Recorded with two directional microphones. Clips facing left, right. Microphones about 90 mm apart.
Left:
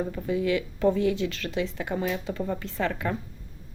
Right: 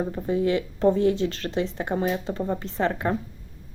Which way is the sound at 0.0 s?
30° right (ahead or behind).